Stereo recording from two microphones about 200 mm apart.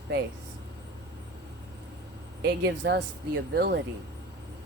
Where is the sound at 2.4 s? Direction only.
60° right (ahead or behind).